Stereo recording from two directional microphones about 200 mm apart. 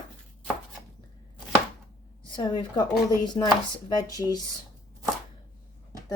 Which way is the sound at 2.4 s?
20° left (ahead or behind).